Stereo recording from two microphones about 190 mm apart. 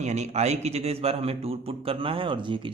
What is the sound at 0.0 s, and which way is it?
Speech, 35° right (ahead or behind).